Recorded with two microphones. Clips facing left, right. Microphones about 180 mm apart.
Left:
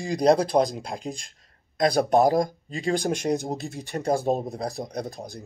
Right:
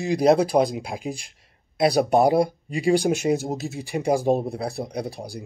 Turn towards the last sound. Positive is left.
turn(degrees=-10)  # may be behind; listen again after turning